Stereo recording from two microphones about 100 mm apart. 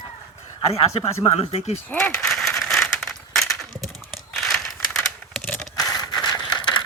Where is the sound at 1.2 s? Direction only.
75° left (ahead or behind).